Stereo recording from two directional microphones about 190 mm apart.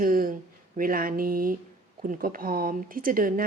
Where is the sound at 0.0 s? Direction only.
45° right (ahead or behind).